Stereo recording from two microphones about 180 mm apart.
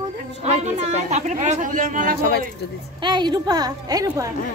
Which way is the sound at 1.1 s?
40° right (ahead or behind).